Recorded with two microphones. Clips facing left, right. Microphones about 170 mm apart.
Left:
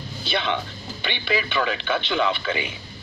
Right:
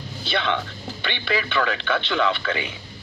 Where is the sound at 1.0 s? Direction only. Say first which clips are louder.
Even; 15° left (ahead or behind).